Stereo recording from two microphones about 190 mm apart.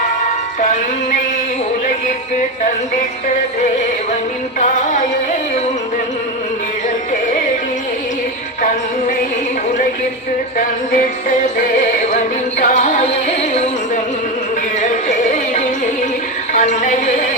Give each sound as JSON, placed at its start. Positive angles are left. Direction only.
{"t": 0.6, "sound": "music", "side_deg": 40}
{"t": 4.6, "sound": "music", "side_deg": 40}
{"t": 10.6, "sound": "music", "side_deg": 45}
{"t": 16.5, "sound": "a woman's voice", "side_deg": 40}